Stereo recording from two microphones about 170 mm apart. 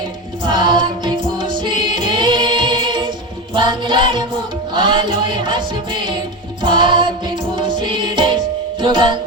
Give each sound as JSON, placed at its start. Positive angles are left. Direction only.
{"t": 0.4, "sound": "music", "side_deg": -25}